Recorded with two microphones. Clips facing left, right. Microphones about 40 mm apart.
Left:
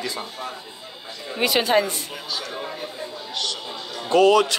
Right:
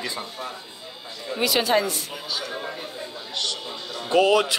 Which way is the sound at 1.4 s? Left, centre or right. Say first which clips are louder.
Left 2 dB; left.